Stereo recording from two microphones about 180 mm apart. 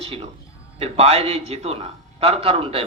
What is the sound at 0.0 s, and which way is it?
A man's voice, 30° right (ahead or behind).